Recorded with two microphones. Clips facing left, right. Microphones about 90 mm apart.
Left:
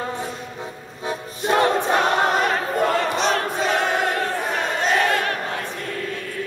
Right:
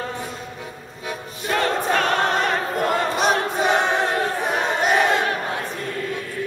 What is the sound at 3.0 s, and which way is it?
Choir, 10° right (ahead or behind).